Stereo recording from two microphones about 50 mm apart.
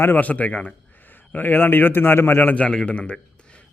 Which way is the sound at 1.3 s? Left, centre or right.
Left.